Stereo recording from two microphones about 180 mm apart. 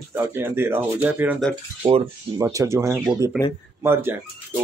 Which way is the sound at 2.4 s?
15° right (ahead or behind).